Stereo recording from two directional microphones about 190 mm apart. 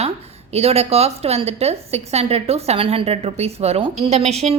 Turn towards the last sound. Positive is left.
turn(degrees=-35)  # may be behind; listen again after turning